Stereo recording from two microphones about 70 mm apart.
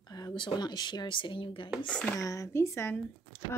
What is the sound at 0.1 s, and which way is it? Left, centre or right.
Speech, left.